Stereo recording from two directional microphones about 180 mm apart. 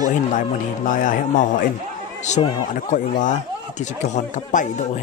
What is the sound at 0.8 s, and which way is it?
Speech, 45° left (ahead or behind).